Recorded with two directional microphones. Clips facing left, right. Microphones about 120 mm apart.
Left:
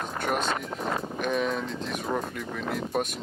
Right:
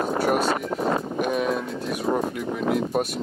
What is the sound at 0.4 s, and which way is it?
Speech, 40° right (ahead or behind).